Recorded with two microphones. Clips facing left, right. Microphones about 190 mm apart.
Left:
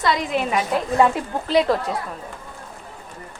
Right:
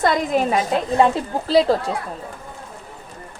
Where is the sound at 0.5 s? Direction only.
25° right (ahead or behind).